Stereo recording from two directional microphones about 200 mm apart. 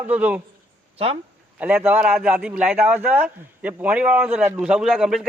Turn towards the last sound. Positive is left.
turn(degrees=-5)  # may be behind; listen again after turning